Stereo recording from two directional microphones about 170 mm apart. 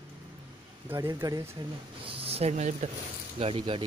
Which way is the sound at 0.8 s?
15° right (ahead or behind).